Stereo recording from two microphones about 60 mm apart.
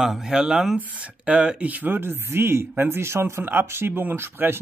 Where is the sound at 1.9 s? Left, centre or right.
Right.